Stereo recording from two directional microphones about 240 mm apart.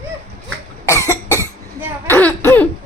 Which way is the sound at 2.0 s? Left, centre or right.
Centre.